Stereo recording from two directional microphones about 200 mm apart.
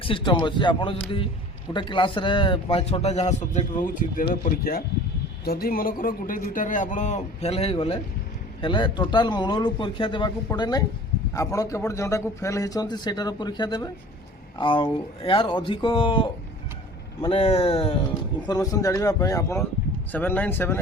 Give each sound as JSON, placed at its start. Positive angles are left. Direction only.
{"t": 0.0, "sound": "a man's voice", "side_deg": 25}
{"t": 18.4, "sound": "speech", "side_deg": 15}